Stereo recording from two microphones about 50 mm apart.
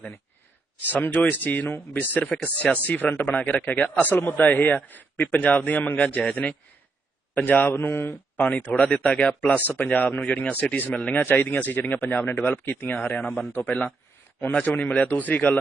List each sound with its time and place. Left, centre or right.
0.9 s speech: left
2.2 s speech: left
4.1 s speech: left
8.4 s speech: left
11.1 s speech: left
13.5 s speech: left
14.5 s speech: left